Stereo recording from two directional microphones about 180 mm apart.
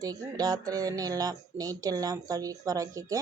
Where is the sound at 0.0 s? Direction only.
20° right (ahead or behind).